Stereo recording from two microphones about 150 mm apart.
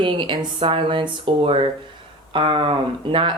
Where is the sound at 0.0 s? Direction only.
35° right (ahead or behind).